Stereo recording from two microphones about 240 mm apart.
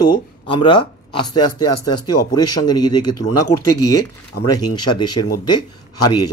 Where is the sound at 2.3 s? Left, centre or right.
Centre.